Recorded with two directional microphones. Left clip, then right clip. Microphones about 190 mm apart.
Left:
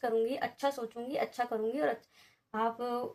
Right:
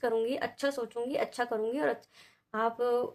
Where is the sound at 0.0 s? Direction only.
35° right (ahead or behind).